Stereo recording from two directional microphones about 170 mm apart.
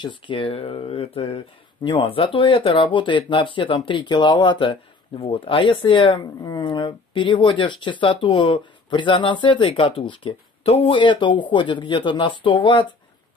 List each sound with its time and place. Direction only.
0.0 s speech: 30° left (ahead or behind)